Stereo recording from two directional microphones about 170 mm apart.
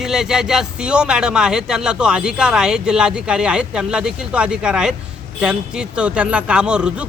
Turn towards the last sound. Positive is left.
turn(degrees=-5)  # may be behind; listen again after turning